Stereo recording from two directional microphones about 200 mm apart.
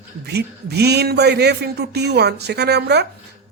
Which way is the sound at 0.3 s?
55° right (ahead or behind).